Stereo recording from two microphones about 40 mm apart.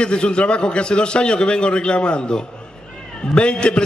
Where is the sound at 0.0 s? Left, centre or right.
Left.